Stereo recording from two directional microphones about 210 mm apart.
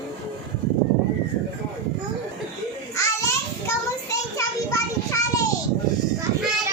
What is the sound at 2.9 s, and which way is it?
Child singing, 15° left (ahead or behind).